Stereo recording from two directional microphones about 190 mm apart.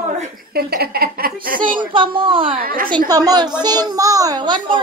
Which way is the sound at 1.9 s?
25° right (ahead or behind).